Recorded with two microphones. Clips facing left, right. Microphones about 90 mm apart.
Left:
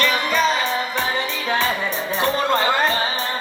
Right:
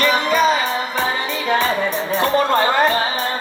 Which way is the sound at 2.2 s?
40° right (ahead or behind).